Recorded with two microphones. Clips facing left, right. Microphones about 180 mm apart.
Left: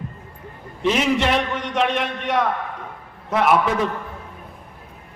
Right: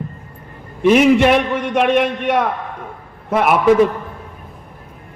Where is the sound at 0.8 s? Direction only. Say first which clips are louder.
Right 9 dB; 55° right (ahead or behind).